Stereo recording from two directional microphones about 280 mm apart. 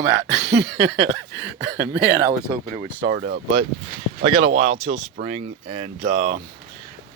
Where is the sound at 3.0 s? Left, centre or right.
Right.